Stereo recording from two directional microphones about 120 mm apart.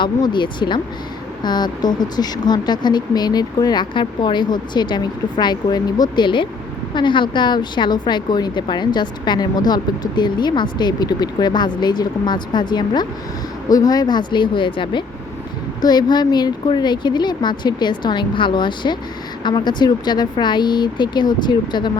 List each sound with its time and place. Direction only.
0.0 s speech: 40° left (ahead or behind)